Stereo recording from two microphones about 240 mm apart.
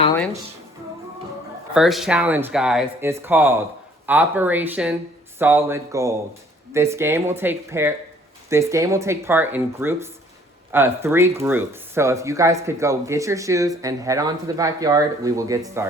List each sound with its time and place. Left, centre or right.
1.7 s speech: centre